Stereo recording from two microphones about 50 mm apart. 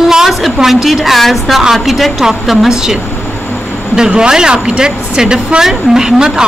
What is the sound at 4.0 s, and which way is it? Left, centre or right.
Speech, centre.